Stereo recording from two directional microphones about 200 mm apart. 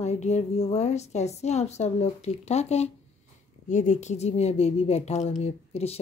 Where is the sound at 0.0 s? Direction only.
35° left (ahead or behind).